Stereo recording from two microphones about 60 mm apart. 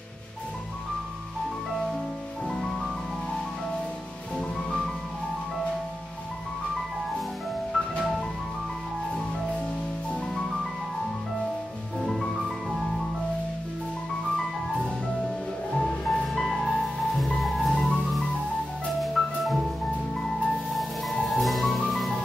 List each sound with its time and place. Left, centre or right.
2.4 s music: centre
7.7 s music: centre
12.1 s music: centre
15.7 s music: centre
17.7 s music: centre
18.9 s music: centre
20.7 s music: centre